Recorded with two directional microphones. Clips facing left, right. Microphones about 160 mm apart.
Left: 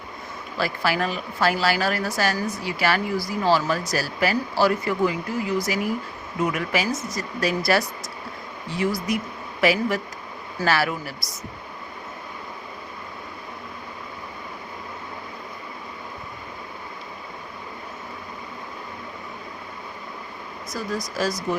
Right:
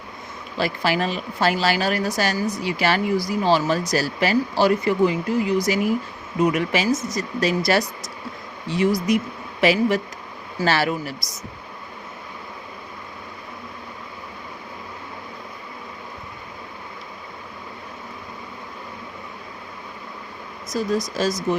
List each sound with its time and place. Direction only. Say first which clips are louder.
0.5 s a woman's voice: right 2 dB; 20° right (ahead or behind)
20.7 s a woman's voice: right 6 dB; 20° right (ahead or behind)